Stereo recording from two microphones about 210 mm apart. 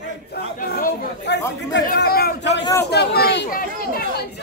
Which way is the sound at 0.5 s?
45° left (ahead or behind).